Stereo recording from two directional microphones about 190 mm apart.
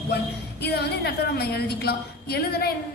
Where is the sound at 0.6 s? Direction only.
60° left (ahead or behind).